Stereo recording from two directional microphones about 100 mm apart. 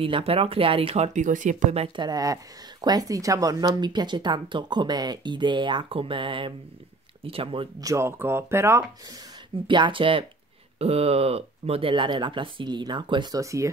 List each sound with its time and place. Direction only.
0.0 s speech: 70° right (ahead or behind); by 1.1 s 85° right
2.0 s speech: 40° right (ahead or behind)
7.2 s speech: 70° right (ahead or behind)
7.8 s speech: 30° right (ahead or behind)
9.7 s speech: 55° right (ahead or behind)
10.8 s speech: 90° right
11.9 s speech: 50° right (ahead or behind)
13.4 s speech: 30° right (ahead or behind)